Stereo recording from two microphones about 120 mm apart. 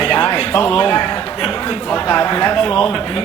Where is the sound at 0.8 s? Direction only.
30° left (ahead or behind).